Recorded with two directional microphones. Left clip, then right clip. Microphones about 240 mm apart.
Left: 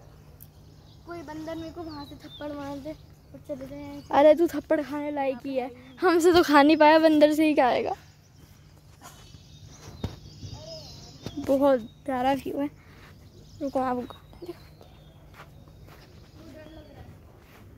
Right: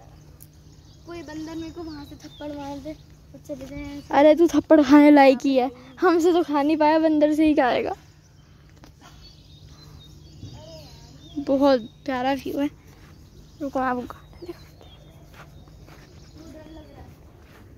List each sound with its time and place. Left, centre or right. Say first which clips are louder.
1.1 s speech: right 2 dB; left
2.0 s a woman's voice: right 1 dB; centre
4.1 s speech: right 3 dB; centre
4.6 s speech: right 10 dB; centre
4.8 s a woman's voice: right 16 dB; right
6.1 s a woman's voice: left 2 dB; centre
11.4 s speech: right 3 dB; centre
13.7 s a sound: right 3 dB; centre